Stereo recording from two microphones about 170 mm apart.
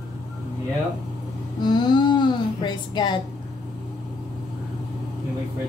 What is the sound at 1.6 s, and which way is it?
A woman's voice, 25° left (ahead or behind).